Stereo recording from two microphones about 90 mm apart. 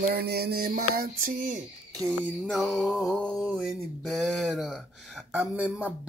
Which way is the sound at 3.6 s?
Centre (ahead or behind).